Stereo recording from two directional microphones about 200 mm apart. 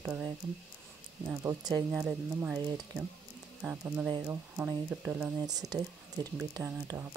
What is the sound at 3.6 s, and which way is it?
Speech, 10° right (ahead or behind).